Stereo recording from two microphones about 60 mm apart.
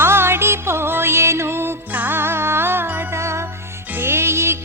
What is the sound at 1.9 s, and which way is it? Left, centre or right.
Music, right.